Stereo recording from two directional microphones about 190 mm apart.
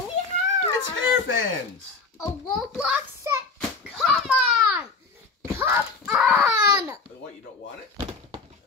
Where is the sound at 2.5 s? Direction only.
Centre (ahead or behind).